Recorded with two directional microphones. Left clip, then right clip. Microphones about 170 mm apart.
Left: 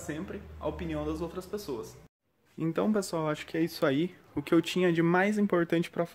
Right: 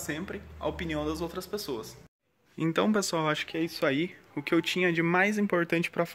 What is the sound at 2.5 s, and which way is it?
Speech, centre (ahead or behind).